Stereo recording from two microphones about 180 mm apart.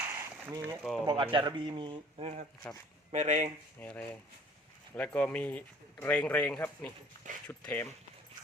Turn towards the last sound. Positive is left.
turn(degrees=10)  # may be behind; listen again after turning